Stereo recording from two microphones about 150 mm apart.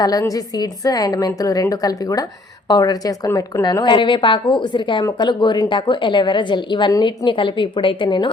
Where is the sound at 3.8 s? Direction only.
30° left (ahead or behind).